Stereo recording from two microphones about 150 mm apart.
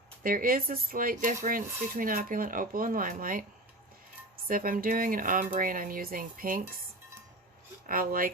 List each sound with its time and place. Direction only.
0.2 s speech: 70° right (ahead or behind)
4.4 s speech: 70° right (ahead or behind)
7.9 s speech: 70° right (ahead or behind)